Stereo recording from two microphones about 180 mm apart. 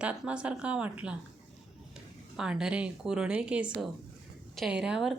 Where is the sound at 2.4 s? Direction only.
5° right (ahead or behind).